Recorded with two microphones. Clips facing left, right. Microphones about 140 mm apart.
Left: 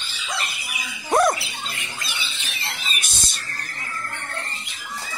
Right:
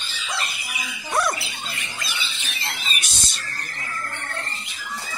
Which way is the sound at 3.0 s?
50° left (ahead or behind).